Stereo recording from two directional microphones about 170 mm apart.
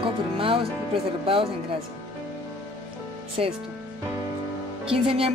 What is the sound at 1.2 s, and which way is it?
Speech, 35° right (ahead or behind).